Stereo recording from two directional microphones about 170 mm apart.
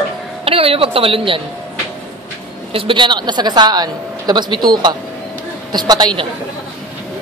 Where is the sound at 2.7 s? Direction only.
30° right (ahead or behind).